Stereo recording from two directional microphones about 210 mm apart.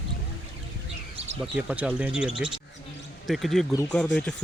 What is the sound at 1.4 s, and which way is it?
Speech, 5° right (ahead or behind).